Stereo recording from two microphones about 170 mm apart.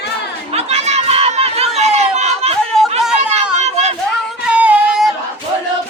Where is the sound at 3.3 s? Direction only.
40° right (ahead or behind).